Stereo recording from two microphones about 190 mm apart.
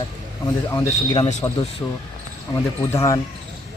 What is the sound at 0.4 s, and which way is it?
Speech, 20° left (ahead or behind).